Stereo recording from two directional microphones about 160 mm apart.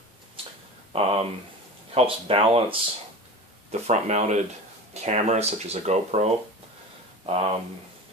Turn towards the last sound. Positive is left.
turn(degrees=-35)  # may be behind; listen again after turning